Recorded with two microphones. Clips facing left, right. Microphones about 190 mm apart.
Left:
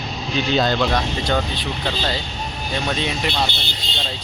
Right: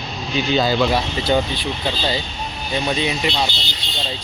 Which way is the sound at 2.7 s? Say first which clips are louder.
Right 3 dB; 5° right (ahead or behind).